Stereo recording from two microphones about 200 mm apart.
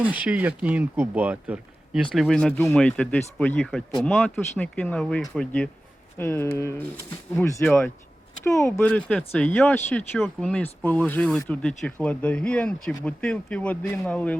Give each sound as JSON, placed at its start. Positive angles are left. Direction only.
{"t": 0.0, "sound": "speech", "side_deg": -5}
{"t": 8.4, "sound": "speech", "side_deg": 15}